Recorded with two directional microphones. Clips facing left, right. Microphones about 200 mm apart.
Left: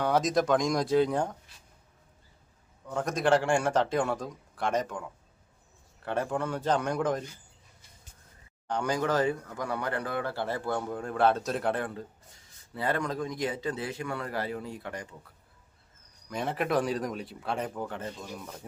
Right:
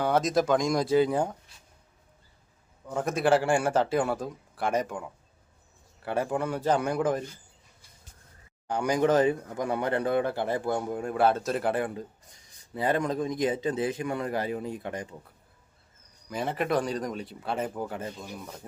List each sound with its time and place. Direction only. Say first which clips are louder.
0.0 s a man's voice: right 1 dB; centre (ahead or behind)
2.8 s a man's voice: right 2 dB; 5° right (ahead or behind)
6.1 s speech: right 2 dB; 10° right (ahead or behind)
8.6 s speech: right 4 dB; 10° right (ahead or behind)
16.3 s a man's voice: right 1 dB; centre (ahead or behind)